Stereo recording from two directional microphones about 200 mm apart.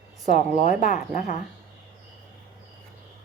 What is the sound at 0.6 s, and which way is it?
Speech, 40° left (ahead or behind).